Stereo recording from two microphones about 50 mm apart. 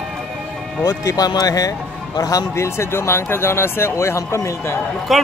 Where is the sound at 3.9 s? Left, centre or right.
Left.